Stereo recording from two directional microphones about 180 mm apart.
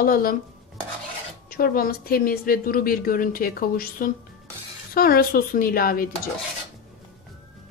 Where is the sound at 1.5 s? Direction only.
55° left (ahead or behind).